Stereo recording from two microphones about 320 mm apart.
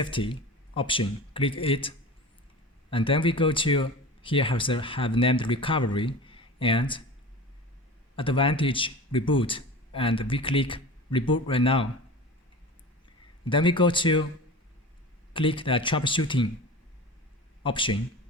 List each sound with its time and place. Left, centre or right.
0.0 s speech: centre
2.9 s speech: centre
8.1 s a man's voice: centre
13.4 s speech: centre
15.3 s speech: centre
17.6 s a man's voice: centre